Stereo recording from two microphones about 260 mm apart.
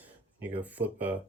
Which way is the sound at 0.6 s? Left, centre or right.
Centre.